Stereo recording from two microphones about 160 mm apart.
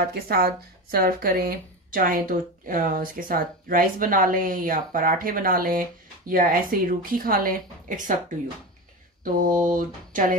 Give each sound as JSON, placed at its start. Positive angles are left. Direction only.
{"t": 0.0, "sound": "speech", "side_deg": -75}
{"t": 9.2, "sound": "speech", "side_deg": -55}